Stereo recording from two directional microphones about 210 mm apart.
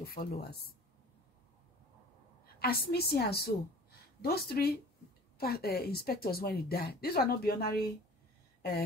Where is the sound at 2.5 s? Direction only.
45° left (ahead or behind).